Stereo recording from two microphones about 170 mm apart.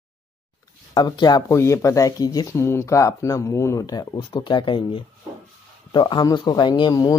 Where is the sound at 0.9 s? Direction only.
25° left (ahead or behind).